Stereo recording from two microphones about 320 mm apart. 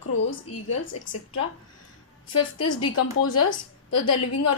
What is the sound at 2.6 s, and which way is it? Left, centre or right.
Speech, left.